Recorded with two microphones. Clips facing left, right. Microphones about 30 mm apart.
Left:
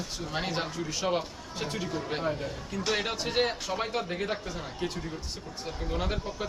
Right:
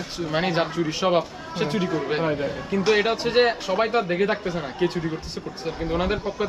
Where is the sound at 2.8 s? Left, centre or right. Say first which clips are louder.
Right 9 dB; right.